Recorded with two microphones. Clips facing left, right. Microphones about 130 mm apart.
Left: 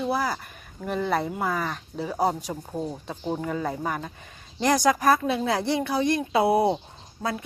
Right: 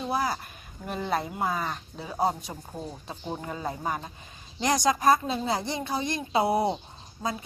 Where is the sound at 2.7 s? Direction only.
20° left (ahead or behind).